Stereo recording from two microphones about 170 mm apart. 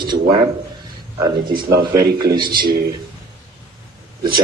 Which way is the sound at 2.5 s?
60° right (ahead or behind).